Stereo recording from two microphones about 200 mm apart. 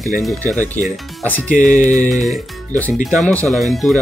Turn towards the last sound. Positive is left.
turn(degrees=0)  # may be behind; listen again after turning